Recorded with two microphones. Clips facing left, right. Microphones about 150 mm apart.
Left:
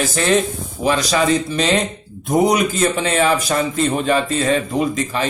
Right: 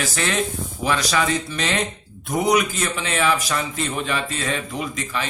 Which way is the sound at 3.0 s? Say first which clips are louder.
Left 1 dB; 40° left (ahead or behind).